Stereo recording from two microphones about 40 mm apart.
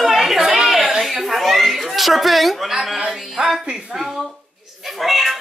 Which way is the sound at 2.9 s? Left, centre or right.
Centre.